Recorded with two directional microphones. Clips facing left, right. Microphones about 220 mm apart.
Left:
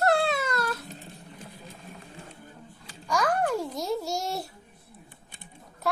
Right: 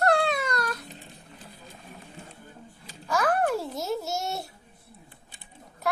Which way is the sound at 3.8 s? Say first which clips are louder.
Left 1 dB; centre (ahead or behind).